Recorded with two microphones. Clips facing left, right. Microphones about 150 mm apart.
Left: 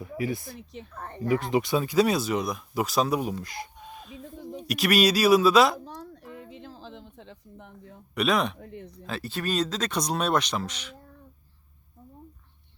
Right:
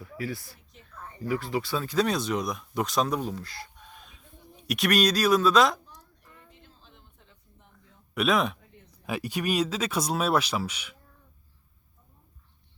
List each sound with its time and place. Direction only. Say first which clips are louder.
0.0 s speech: left 5 dB; 20° left (ahead or behind)
0.7 s speech: left 4 dB; 70° left (ahead or behind)
1.3 s speech: left 5 dB; 20° left (ahead or behind)
4.4 s a sound: left 15 dB; 90° left
4.6 s speech: left 2 dB; centre (ahead or behind)
5.8 s a sound: left 14 dB; 90° left; by 8.0 s 65° left (ahead or behind)
8.1 s speech: even; centre (ahead or behind)
8.5 s a sound: left 14 dB; 70° left (ahead or behind)
9.0 s speech: right 2 dB; 15° right (ahead or behind)